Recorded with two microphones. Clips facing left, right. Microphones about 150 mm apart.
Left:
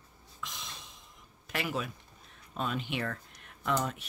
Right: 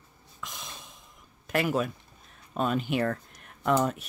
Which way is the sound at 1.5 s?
50° right (ahead or behind).